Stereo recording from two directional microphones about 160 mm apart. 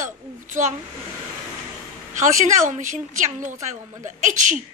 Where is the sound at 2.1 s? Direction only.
50° right (ahead or behind).